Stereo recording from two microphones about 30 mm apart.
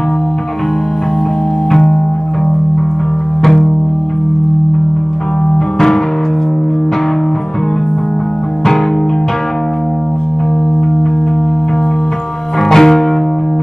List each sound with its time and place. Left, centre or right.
1.7 s music: centre
12.6 s music: centre